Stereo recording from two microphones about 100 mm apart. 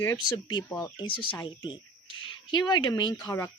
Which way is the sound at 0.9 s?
55° left (ahead or behind).